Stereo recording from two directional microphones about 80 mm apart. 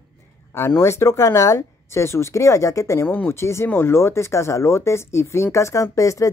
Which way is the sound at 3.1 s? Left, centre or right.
Left.